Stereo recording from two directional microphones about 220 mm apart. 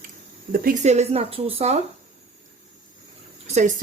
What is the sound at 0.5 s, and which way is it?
Speech, 35° right (ahead or behind).